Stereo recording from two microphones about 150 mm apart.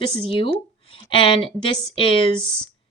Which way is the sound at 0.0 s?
35° left (ahead or behind).